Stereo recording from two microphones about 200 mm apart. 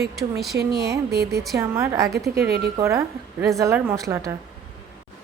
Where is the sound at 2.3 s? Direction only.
50° right (ahead or behind).